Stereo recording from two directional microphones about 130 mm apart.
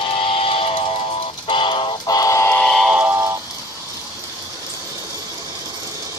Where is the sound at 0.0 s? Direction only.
40° left (ahead or behind); by 2.6 s 20° left (ahead or behind).